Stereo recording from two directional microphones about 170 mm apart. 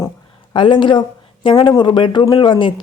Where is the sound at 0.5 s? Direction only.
30° left (ahead or behind).